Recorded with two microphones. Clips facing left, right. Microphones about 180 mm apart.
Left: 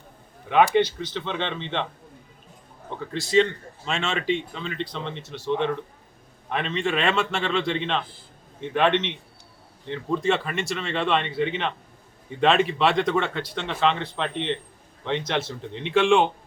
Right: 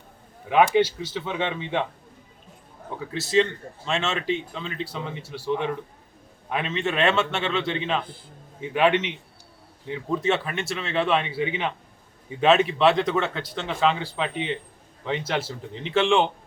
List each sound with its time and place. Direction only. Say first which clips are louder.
0.5 s speech: even; 5° right (ahead or behind)
3.0 s speech: left 1 dB; 5° right (ahead or behind)